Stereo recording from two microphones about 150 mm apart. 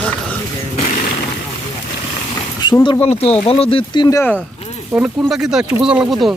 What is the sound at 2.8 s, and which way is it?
Speech, 35° left (ahead or behind).